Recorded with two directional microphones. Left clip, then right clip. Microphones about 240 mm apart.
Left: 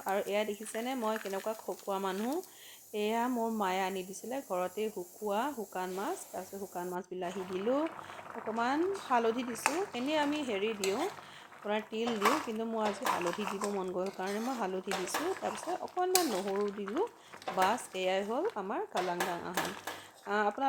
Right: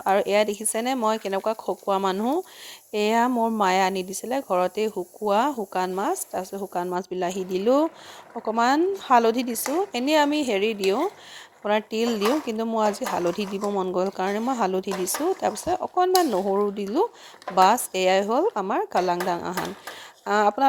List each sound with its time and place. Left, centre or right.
0.0 s speech: right